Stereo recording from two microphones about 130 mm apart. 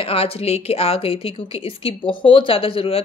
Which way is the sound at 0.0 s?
50° left (ahead or behind).